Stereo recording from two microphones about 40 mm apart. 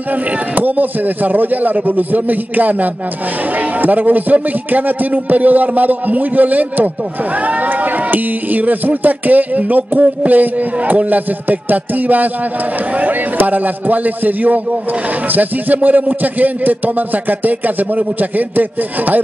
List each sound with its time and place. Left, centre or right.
0.6 s a man's voice: right
13.4 s a man's voice: right